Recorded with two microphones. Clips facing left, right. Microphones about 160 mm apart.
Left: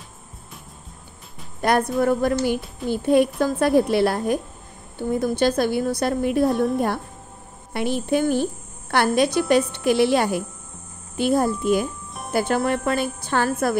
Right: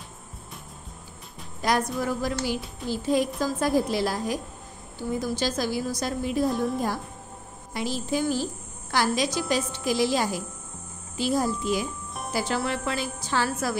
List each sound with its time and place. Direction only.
1.6 s a woman's voice: 55° left (ahead or behind)